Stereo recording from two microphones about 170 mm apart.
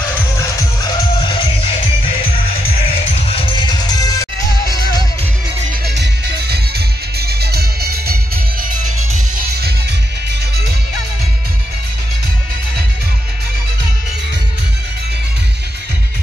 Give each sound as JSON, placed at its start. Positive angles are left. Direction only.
{"t": 0.8, "sound": "music", "side_deg": 30}
{"t": 3.3, "sound": "music", "side_deg": 30}
{"t": 5.9, "sound": "music", "side_deg": -75}